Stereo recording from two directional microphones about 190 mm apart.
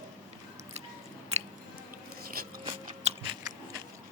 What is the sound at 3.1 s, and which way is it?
Biting, 35° right (ahead or behind).